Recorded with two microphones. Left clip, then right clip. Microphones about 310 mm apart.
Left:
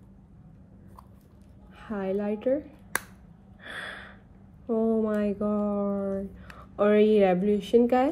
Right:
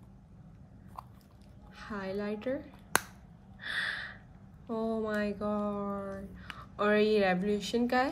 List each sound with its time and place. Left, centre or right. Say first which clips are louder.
1.8 s a woman's voice: left 7 dB; centre
4.6 s speech: left 8 dB; left
5.4 s a sound: left 6 dB; left
6.3 s a woman's voice: left 6 dB; centre